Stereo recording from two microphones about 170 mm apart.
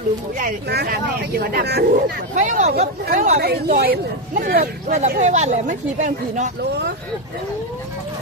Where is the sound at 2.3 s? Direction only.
45° right (ahead or behind).